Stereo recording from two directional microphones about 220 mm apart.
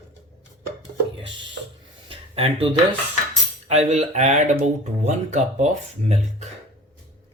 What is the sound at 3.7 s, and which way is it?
Speech, 30° right (ahead or behind).